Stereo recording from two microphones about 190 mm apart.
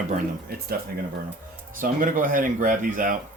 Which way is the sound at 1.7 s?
45° right (ahead or behind).